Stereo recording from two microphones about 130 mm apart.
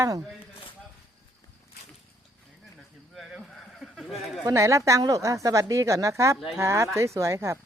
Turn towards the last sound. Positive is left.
turn(degrees=-20)  # may be behind; listen again after turning